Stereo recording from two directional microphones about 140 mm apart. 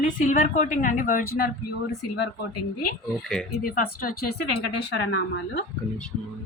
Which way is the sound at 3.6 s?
90° left.